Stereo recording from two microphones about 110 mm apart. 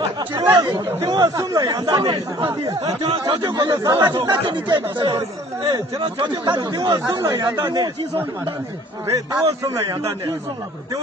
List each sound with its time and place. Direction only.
0.6 s speech: 40° right (ahead or behind)
3.7 s speech: 35° right (ahead or behind)
9.0 s a man's voice: 25° right (ahead or behind)